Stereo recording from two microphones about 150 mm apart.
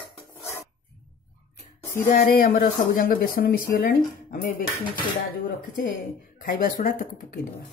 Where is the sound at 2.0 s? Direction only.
85° left.